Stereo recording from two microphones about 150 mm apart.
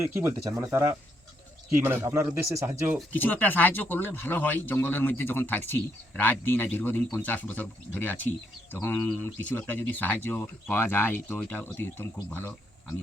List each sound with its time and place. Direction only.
0.0 s speech: 20° right (ahead or behind)
3.1 s speech: 10° left (ahead or behind)